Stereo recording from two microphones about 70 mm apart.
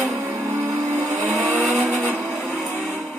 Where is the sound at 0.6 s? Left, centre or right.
Right.